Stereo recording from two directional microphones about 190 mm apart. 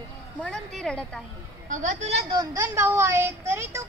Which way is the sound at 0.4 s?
Centre (ahead or behind).